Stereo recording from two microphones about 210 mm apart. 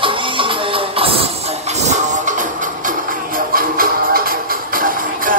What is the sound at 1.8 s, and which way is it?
Music, 35° right (ahead or behind).